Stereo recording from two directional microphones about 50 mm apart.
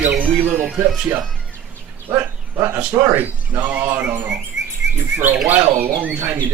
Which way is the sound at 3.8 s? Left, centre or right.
Right.